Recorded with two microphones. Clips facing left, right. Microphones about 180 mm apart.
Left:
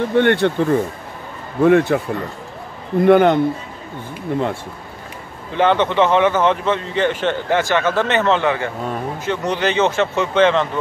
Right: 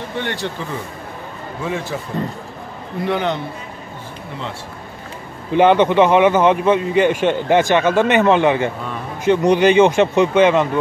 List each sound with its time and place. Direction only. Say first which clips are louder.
0.1 s speech: left 10 dB; 60° left (ahead or behind)
3.0 s a man's voice: left 9 dB; 50° left (ahead or behind)
5.5 s a man's voice: right 4 dB; 15° right (ahead or behind)